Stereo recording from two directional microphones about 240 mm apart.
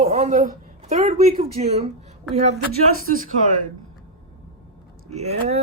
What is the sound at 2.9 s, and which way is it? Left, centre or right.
Speech, right.